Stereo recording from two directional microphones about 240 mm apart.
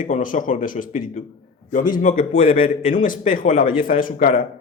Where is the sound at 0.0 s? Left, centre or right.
Left.